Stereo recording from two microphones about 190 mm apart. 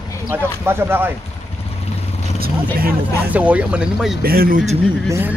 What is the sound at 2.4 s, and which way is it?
Speech, 50° right (ahead or behind).